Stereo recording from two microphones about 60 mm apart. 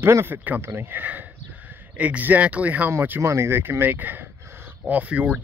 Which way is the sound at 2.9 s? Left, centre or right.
Right.